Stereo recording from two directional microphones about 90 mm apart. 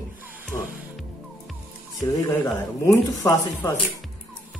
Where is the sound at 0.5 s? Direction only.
30° left (ahead or behind).